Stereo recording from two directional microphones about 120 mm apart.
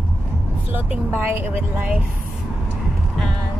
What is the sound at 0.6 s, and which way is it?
Speech, 10° right (ahead or behind).